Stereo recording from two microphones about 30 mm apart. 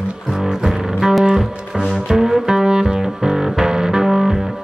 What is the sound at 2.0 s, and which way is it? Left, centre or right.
Music, centre.